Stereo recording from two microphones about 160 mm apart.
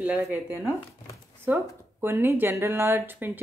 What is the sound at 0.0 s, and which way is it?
Speech, 10° right (ahead or behind).